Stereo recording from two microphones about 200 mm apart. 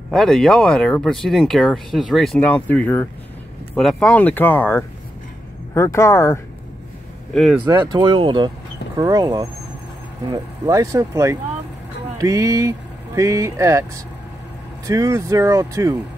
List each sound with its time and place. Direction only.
0.1 s speech: 5° left (ahead or behind)
7.3 s speech: centre (ahead or behind)
7.6 s speech: 20° right (ahead or behind)
14.9 s speech: 15° right (ahead or behind)